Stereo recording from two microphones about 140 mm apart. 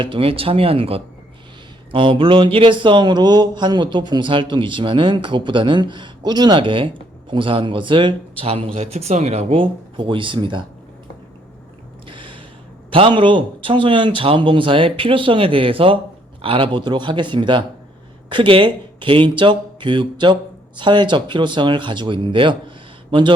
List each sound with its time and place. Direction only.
0.0 s speech: 40° right (ahead or behind)
12.0 s a sound: 35° right (ahead or behind)
12.9 s speech: 40° right (ahead or behind)